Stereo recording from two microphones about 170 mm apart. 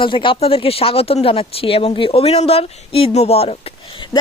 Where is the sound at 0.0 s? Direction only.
30° left (ahead or behind).